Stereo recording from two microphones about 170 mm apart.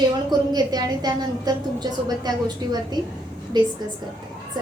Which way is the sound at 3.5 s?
25° right (ahead or behind).